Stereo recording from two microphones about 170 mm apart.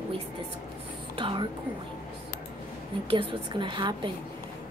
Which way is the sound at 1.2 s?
30° right (ahead or behind).